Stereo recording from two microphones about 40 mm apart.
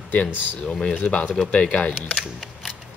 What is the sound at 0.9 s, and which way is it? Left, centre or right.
Speech, left.